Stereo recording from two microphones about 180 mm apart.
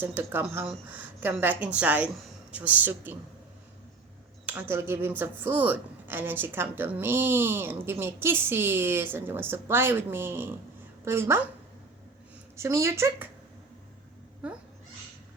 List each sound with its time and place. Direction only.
0.0 s a woman's voice: 10° right (ahead or behind)
4.4 s a woman's voice: 10° right (ahead or behind)
12.5 s a woman's voice: 15° right (ahead or behind)